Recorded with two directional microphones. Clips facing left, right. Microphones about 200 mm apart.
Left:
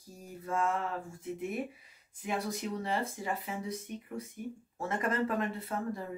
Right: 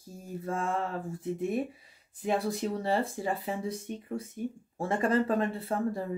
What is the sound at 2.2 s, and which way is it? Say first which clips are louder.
Speech: right 6 dB; 35° right (ahead or behind).